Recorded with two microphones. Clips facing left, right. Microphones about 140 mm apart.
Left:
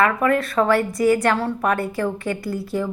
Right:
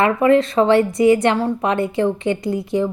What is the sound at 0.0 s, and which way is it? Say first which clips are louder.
A woman's voice: right 5 dB; 25° right (ahead or behind).